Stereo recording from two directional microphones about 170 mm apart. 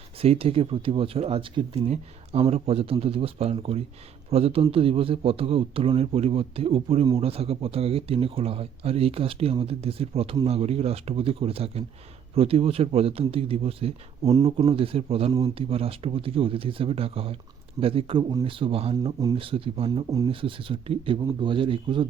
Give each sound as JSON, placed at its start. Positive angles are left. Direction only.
{"t": 0.2, "sound": "speech", "side_deg": -35}
{"t": 19.9, "sound": "a man's voice", "side_deg": -20}
{"t": 20.2, "sound": "a man's voice", "side_deg": -30}